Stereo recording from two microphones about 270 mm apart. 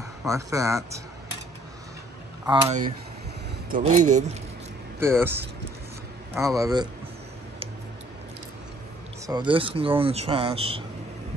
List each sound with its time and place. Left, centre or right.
0.3 s speech: centre
2.4 s speech: centre
3.7 s speech: right
5.0 s speech: centre
9.2 s speech: centre